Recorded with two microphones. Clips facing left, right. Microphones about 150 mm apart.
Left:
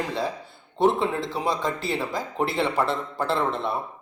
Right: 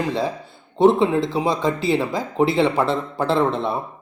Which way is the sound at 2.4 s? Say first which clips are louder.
Right 8 dB; 80° right.